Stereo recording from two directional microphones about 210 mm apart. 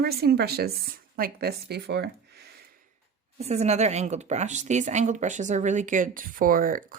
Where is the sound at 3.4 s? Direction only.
30° right (ahead or behind).